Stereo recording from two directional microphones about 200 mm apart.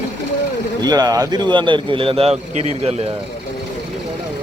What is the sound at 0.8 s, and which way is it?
A man's voice, 20° right (ahead or behind).